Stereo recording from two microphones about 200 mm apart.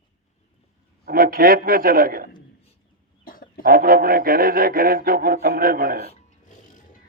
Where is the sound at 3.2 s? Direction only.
45° left (ahead or behind).